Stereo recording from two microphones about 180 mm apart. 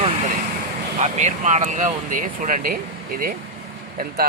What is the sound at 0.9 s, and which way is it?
Speech, 40° right (ahead or behind).